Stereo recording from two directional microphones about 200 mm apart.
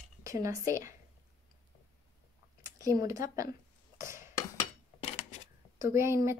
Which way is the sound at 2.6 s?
15° right (ahead or behind).